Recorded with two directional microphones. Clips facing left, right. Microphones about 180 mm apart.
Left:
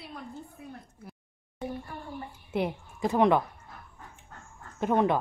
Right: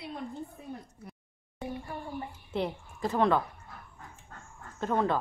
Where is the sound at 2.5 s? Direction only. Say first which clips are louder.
Left 3 dB; 15° left (ahead or behind).